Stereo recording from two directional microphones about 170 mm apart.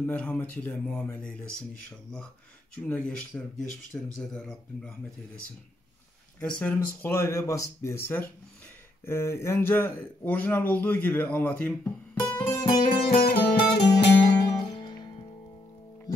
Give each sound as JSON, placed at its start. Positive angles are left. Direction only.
{"t": 0.0, "sound": "a man's voice", "side_deg": 10}
{"t": 2.7, "sound": "a man's voice", "side_deg": 5}
{"t": 6.6, "sound": "a man's voice", "side_deg": 10}
{"t": 13.1, "sound": "music", "side_deg": 65}
{"t": 14.6, "sound": "music", "side_deg": 25}